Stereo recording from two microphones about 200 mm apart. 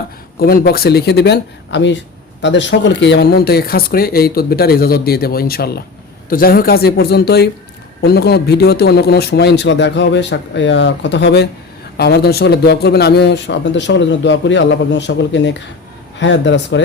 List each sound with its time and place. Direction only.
0.3 s a man's voice: 50° left (ahead or behind); by 16.8 s 65° left (ahead or behind)